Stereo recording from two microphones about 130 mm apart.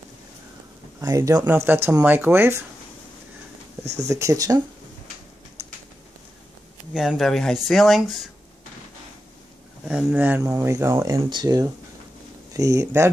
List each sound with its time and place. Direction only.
1.0 s speech: 25° right (ahead or behind)
3.8 s speech: 55° right (ahead or behind)
4.1 s speech: 25° right (ahead or behind)
6.9 s speech: centre (ahead or behind)
9.8 s speech: 10° right (ahead or behind)
11.2 s speech: 30° right (ahead or behind)